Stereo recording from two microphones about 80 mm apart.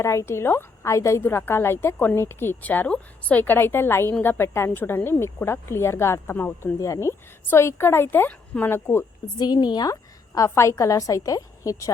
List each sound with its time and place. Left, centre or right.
0.0 s a woman's voice: left
6.7 s a woman's voice: left; by 8.7 s centre
8.7 s a woman's voice: left
9.4 s a woman's voice: left
9.9 s a woman's voice: left